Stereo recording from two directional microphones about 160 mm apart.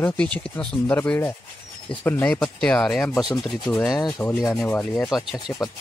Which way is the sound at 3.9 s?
25° left (ahead or behind).